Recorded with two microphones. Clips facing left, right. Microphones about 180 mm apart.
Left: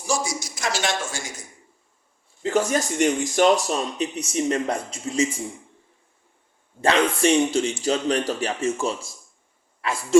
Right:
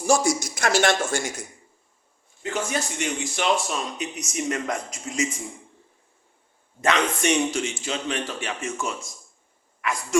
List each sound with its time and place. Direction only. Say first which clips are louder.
0.0 s a woman's voice: right 6 dB; 55° right (ahead or behind)
2.4 s speech: left 6 dB; 40° left (ahead or behind)
6.8 s speech: left 3 dB; 30° left (ahead or behind)